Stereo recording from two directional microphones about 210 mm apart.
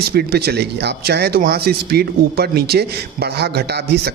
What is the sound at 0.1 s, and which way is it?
A man's voice, 50° right (ahead or behind).